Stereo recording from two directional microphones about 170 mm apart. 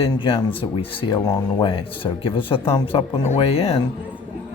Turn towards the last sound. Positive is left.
turn(degrees=35)  # may be behind; listen again after turning